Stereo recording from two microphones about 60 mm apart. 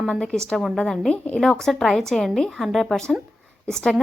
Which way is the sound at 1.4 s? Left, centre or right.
Centre.